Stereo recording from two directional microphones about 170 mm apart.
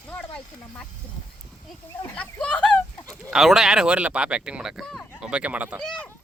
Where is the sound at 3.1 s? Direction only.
Centre (ahead or behind).